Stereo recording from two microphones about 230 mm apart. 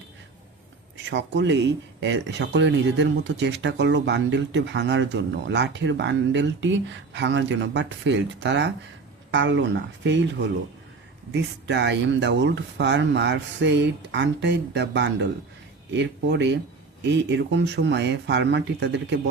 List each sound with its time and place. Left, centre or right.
1.1 s speech: right
11.3 s speech: right